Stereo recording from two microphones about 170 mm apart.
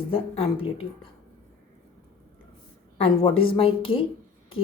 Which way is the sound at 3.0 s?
30° left (ahead or behind).